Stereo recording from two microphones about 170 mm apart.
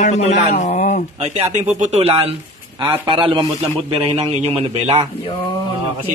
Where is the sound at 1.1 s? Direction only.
40° right (ahead or behind).